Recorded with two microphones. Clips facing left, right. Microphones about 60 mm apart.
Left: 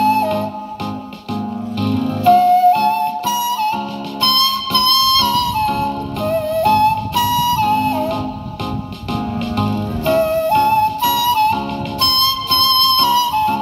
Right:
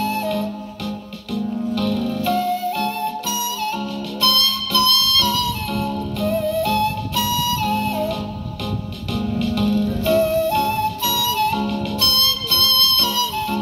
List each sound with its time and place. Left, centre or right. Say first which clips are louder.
0.0 s music: left 7 dB; left
1.8 s music: left 5 dB; left
2.3 s music: left 11 dB; left
9.4 s music: right 4 dB; left